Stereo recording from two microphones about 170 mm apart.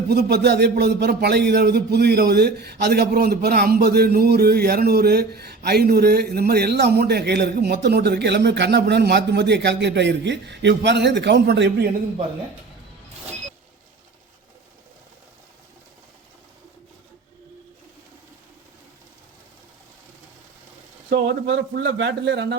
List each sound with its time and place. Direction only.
0.1 s speech: 75° right (ahead or behind)
21.1 s speech: 85° right